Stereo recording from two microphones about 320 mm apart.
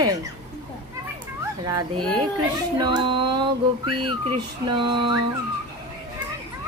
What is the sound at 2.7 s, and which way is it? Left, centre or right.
Speech, centre.